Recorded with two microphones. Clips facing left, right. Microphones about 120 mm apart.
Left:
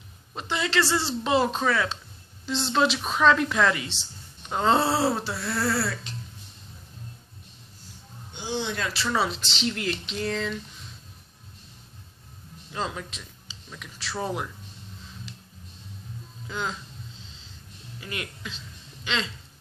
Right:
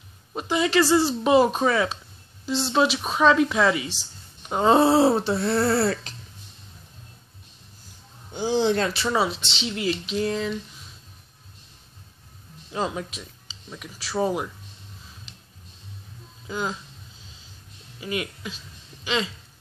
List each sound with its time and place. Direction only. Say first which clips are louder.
0.3 s speech: right 6 dB; 15° right (ahead or behind)
2.4 s speech: right 2 dB; 5° right (ahead or behind); by 5.9 s 25° right (ahead or behind)
8.3 s speech: right 9 dB; 40° right (ahead or behind)
8.9 s speech: right 3 dB; 15° right (ahead or behind)
9.3 s speech: left 1 dB; centre (ahead or behind)
12.7 s speech: right 4 dB; 15° right (ahead or behind)
16.4 s speech: right 3 dB; 10° right (ahead or behind)
18.0 s speech: right 7 dB; 15° right (ahead or behind)